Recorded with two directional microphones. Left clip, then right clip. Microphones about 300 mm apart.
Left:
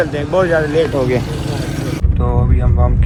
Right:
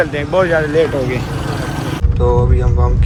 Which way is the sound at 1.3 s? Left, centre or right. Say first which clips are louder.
Right 1 dB; centre.